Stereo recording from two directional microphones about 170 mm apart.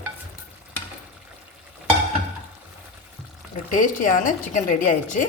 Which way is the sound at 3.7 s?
50° left (ahead or behind).